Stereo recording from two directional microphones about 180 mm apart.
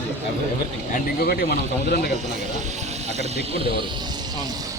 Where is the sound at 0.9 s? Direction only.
55° left (ahead or behind).